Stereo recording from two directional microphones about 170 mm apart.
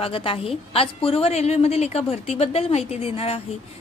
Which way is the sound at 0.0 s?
30° left (ahead or behind).